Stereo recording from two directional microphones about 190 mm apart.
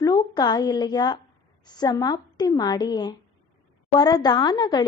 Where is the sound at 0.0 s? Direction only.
20° left (ahead or behind).